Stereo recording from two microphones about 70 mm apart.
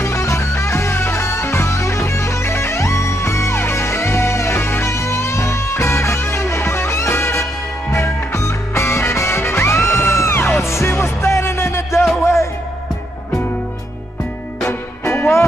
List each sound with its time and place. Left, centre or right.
0.0 s music: left
14.6 s music: left